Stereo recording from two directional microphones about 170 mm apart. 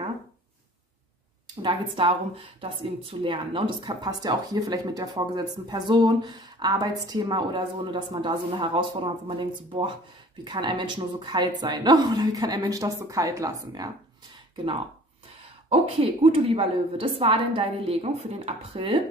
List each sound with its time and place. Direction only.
1.6 s speech: 30° right (ahead or behind)
15.7 s a woman's voice: 35° right (ahead or behind)